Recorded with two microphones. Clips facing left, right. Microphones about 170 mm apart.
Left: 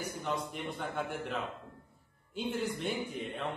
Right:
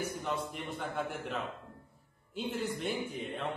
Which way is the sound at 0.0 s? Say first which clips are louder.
Right 1 dB; centre (ahead or behind).